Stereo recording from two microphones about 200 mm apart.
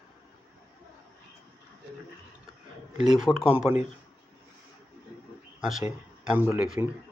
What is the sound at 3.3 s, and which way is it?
Speech, 15° left (ahead or behind).